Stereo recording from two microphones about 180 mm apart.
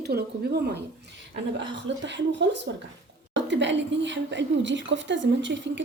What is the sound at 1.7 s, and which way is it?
A woman's voice, 80° right.